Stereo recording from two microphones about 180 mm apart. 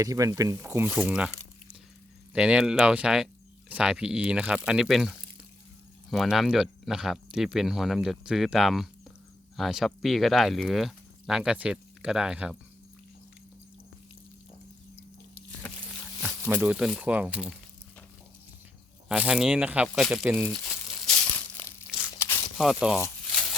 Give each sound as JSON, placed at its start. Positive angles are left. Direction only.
{"t": 0.0, "sound": "speech", "side_deg": -20}
{"t": 2.3, "sound": "speech", "side_deg": -5}
{"t": 16.5, "sound": "speech", "side_deg": -5}
{"t": 19.0, "sound": "speech", "side_deg": -5}
{"t": 19.9, "sound": "crumpling", "side_deg": 0}
{"t": 21.8, "sound": "tearing", "side_deg": -5}
{"t": 22.2, "sound": "a sound", "side_deg": 15}
{"t": 22.5, "sound": "speech", "side_deg": -5}